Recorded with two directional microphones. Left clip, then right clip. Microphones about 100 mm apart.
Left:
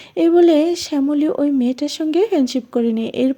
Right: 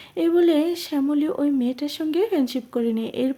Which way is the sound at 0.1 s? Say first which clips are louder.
Left 6 dB; 40° left (ahead or behind).